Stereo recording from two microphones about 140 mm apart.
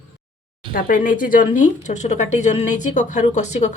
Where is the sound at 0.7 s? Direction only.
80° left.